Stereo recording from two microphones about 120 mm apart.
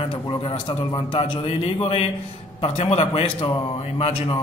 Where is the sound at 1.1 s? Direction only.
55° left (ahead or behind).